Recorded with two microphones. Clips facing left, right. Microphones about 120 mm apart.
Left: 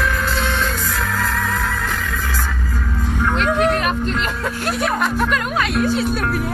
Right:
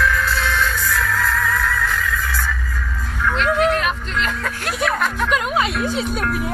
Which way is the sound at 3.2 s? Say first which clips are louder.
Even; 45° left (ahead or behind).